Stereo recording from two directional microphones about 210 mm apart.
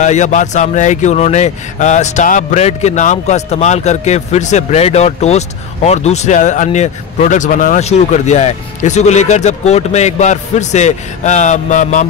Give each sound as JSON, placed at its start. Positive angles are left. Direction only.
{"t": 0.0, "sound": "speech", "side_deg": 35}